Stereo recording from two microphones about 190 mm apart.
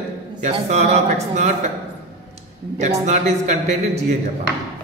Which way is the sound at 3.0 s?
35° right (ahead or behind).